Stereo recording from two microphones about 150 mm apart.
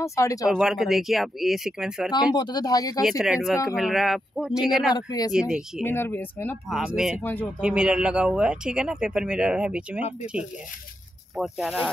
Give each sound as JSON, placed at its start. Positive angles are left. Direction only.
{"t": 0.0, "sound": "speech", "side_deg": 20}
{"t": 0.6, "sound": "speech", "side_deg": -5}
{"t": 2.3, "sound": "speech", "side_deg": 25}
{"t": 3.0, "sound": "speech", "side_deg": -5}
{"t": 4.9, "sound": "speech", "side_deg": 25}
{"t": 5.3, "sound": "speech", "side_deg": -5}
{"t": 5.9, "sound": "speech", "side_deg": 15}
{"t": 6.7, "sound": "speech", "side_deg": -5}
{"t": 11.3, "sound": "speech", "side_deg": -5}